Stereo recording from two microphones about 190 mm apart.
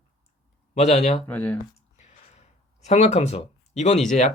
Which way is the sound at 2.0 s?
35° left (ahead or behind).